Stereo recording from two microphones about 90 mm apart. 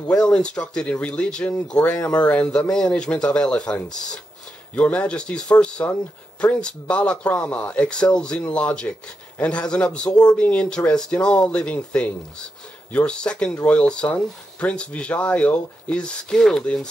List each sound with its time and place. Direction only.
0.2 s speech: 10° left (ahead or behind)